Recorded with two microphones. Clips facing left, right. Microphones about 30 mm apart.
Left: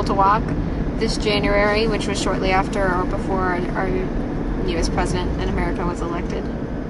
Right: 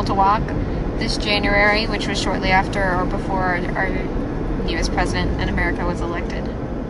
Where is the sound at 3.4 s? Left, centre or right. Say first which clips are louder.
Right 2 dB; right.